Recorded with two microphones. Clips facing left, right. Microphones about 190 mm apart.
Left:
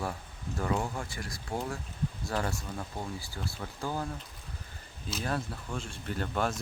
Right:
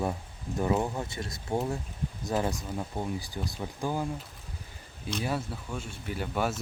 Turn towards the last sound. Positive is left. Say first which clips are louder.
# right 1 dB
turn(degrees=-5)  # may be behind; listen again after turning